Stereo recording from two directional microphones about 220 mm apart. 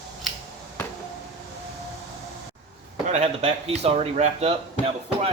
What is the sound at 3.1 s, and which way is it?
A man's voice, 30° right (ahead or behind).